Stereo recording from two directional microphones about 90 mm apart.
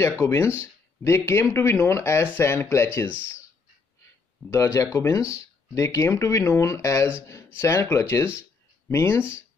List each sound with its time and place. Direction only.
0.2 s speech: 30° left (ahead or behind)
3.1 s speech: 15° right (ahead or behind)
4.5 s speech: 35° left (ahead or behind)
8.4 s a sound: 30° left (ahead or behind)